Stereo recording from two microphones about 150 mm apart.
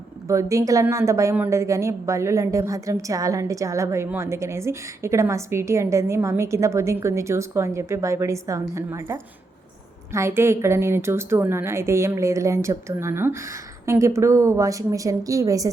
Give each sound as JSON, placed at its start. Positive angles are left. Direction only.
{"t": 0.3, "sound": "a woman's voice", "side_deg": -20}